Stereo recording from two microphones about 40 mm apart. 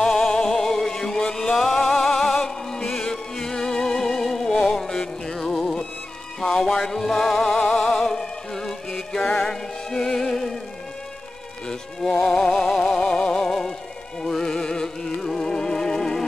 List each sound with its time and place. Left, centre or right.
0.0 s music: centre
11.6 s music: centre